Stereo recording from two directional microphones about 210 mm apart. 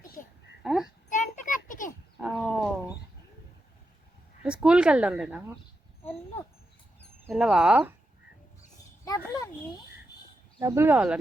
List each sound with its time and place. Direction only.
0.6 s a child's voice: centre (ahead or behind)
1.1 s a sound: 35° left (ahead or behind)
2.2 s roaring cats: centre (ahead or behind)
4.4 s speech: 5° right (ahead or behind)
7.3 s speech: centre (ahead or behind)
9.0 s children playing: 20° left (ahead or behind)
10.6 s speech: 15° right (ahead or behind)